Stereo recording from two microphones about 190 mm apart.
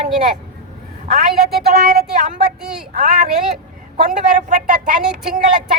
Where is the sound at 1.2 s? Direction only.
55° right (ahead or behind).